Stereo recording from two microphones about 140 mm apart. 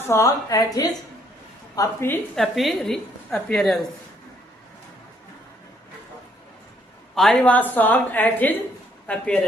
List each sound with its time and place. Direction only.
0.0 s a woman's voice: 20° left (ahead or behind)
2.3 s a woman's voice: centre (ahead or behind)
7.2 s a woman's voice: 5° left (ahead or behind)